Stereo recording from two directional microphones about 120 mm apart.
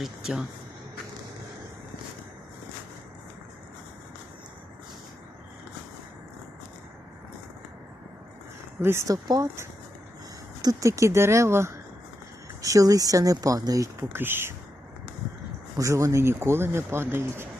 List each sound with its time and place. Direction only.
0.0 s speech: 5° right (ahead or behind)
8.8 s speech: 20° right (ahead or behind)
15.8 s speech: 25° right (ahead or behind)